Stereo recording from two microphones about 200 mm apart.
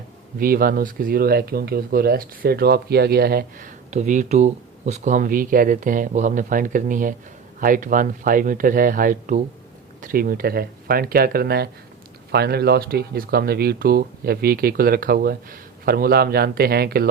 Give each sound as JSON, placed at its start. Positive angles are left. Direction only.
{"t": 0.3, "sound": "speech", "side_deg": -45}